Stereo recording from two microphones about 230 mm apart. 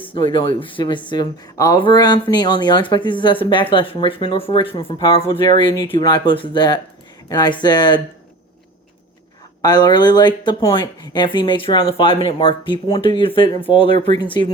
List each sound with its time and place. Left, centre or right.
0.1 s speech: left
9.6 s speech: centre